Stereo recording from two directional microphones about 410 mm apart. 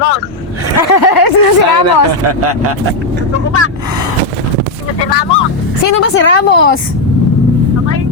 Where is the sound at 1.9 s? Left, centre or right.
Right.